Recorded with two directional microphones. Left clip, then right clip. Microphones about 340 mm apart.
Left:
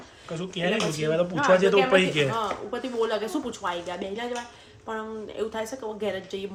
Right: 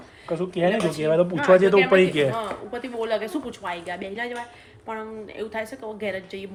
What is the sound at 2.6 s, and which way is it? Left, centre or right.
Speech, centre.